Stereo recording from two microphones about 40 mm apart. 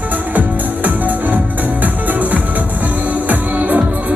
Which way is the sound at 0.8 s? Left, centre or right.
Right.